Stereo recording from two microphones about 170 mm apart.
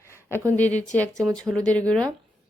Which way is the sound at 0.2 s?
15° right (ahead or behind).